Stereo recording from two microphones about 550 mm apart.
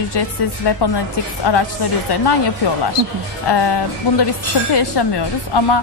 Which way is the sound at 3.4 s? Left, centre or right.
Left.